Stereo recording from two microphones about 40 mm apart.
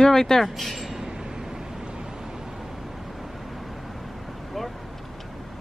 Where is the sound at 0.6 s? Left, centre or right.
Centre.